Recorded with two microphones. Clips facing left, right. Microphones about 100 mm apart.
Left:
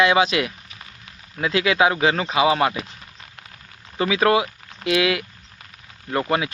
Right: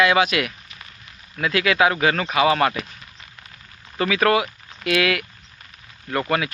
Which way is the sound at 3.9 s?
20° left (ahead or behind).